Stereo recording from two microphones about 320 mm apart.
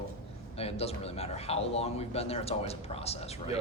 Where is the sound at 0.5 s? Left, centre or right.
Centre.